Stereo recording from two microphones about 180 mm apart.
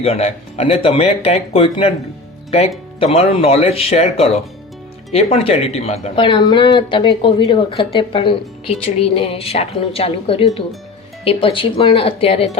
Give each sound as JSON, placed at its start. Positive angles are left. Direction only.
{"t": 0.0, "sound": "speech", "side_deg": 35}